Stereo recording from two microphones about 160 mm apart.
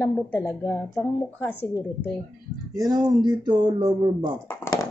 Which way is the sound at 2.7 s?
25° right (ahead or behind).